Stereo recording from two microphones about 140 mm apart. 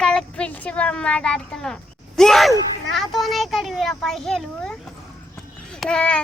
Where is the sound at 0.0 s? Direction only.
5° left (ahead or behind).